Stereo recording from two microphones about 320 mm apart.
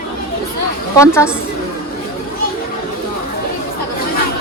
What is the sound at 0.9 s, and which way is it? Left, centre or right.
Speech, centre.